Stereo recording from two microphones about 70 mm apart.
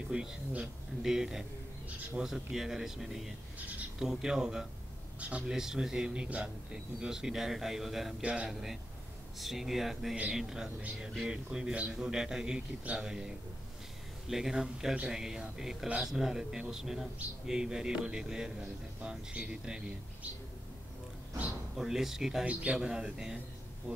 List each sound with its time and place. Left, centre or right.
0.1 s a man's voice: centre
8.2 s a man's voice: centre
8.5 s a man's voice: centre
14.3 s a man's voice: centre
21.7 s speech: centre
22.5 s a man's voice: right
22.8 s a man's voice: centre